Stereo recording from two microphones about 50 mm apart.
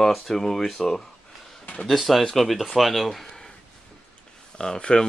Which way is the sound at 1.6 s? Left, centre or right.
Left.